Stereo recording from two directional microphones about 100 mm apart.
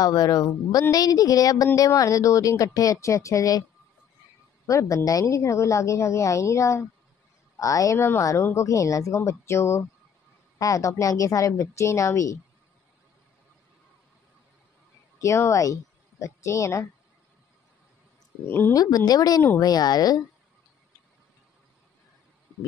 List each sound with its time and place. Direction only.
0.0 s a woman's voice: 40° left (ahead or behind)
4.6 s a woman's voice: 30° left (ahead or behind)
15.1 s speech: 30° left (ahead or behind)
18.4 s speech: 25° left (ahead or behind)
18.7 s a woman's voice: 40° left (ahead or behind)